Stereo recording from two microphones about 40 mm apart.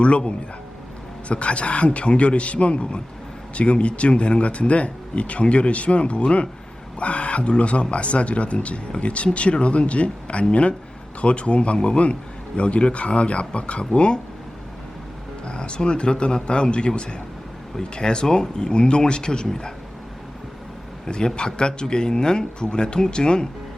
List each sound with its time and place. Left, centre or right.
1.3 s speech: left
15.4 s speech: left
21.1 s speech: left